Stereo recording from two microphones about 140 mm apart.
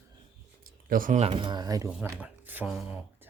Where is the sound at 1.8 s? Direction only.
10° right (ahead or behind).